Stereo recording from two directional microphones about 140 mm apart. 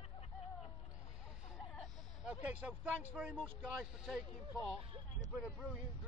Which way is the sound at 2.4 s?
10° right (ahead or behind).